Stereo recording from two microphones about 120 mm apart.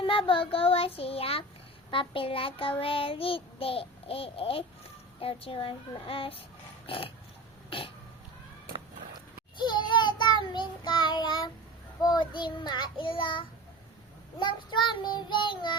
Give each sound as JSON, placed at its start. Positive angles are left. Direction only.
{"t": 0.0, "sound": "child singing", "side_deg": 45}
{"t": 6.8, "sound": "pig", "side_deg": 50}
{"t": 7.7, "sound": "child singing", "side_deg": 45}
{"t": 9.6, "sound": "child singing", "side_deg": 40}